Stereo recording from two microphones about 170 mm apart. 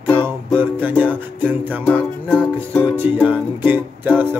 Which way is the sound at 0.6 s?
10° right (ahead or behind).